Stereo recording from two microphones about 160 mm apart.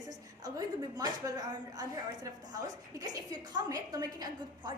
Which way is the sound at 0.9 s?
25° right (ahead or behind).